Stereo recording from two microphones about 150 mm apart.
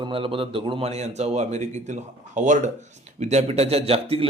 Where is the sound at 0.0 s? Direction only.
35° right (ahead or behind).